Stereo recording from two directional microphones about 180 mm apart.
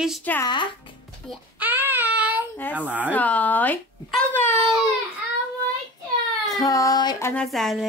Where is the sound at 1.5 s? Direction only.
10° right (ahead or behind).